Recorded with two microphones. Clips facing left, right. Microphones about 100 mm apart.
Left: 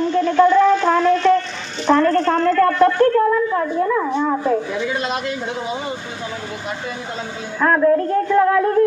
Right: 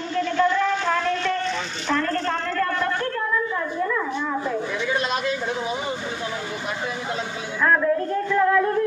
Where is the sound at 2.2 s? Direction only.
55° left (ahead or behind).